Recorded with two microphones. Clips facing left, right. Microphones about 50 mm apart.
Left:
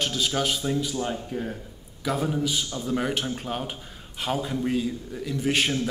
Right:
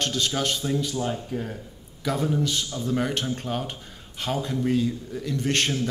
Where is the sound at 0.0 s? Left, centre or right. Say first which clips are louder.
Even; centre.